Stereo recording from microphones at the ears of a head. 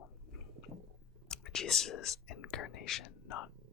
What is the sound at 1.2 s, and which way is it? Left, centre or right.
Whispering, left.